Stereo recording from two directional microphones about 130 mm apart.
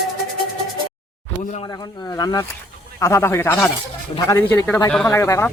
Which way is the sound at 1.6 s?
30° left (ahead or behind).